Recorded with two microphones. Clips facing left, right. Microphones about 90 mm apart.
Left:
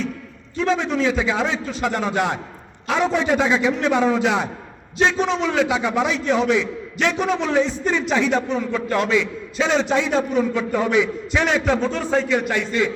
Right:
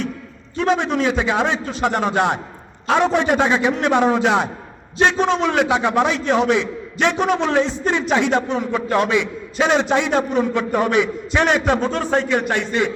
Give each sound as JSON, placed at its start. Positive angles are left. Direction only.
{"t": 0.5, "sound": "a man's voice", "side_deg": -60}